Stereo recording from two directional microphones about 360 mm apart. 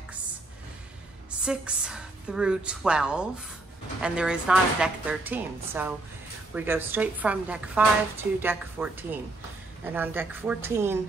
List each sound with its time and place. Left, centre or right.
1.4 s a woman's voice: centre